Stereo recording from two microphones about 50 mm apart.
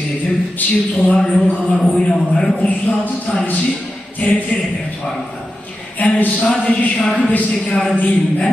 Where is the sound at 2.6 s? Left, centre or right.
Left.